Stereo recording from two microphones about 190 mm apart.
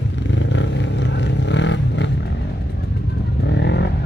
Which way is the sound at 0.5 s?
70° left (ahead or behind).